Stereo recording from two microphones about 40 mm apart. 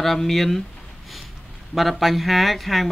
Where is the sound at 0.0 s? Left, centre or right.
Centre.